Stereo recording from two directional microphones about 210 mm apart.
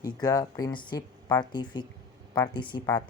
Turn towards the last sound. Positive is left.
turn(degrees=20)  # may be behind; listen again after turning